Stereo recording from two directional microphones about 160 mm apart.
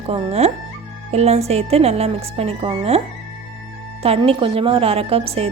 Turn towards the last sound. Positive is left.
turn(degrees=-40)  # may be behind; listen again after turning